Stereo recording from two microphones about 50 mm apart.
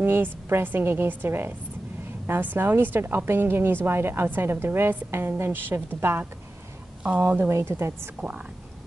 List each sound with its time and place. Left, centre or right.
0.0 s a woman's voice: right
5.5 s a woman's voice: right
7.4 s a woman's voice: right